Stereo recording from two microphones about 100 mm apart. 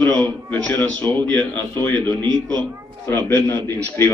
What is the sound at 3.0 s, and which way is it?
Speech, 20° left (ahead or behind).